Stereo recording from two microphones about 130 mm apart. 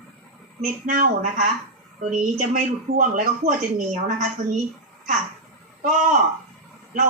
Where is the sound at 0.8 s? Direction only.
80° right.